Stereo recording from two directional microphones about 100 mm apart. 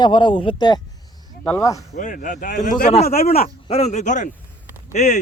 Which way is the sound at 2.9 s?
90° left.